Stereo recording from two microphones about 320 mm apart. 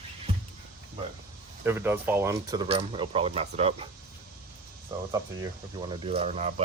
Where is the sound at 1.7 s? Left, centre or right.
Centre.